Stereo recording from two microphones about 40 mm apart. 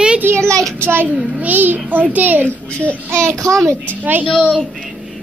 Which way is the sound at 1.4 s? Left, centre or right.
Right.